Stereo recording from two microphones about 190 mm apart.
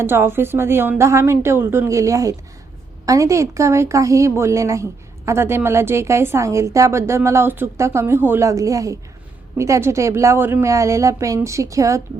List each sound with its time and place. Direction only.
0.0 s a woman's voice: 10° right (ahead or behind)